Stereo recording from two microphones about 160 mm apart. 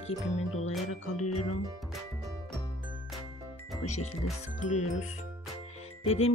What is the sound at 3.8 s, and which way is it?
Speech, 45° left (ahead or behind).